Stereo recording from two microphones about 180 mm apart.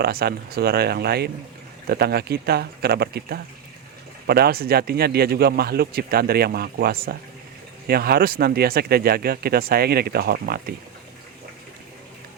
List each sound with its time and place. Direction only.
0.0 s a man's voice: 60° right (ahead or behind)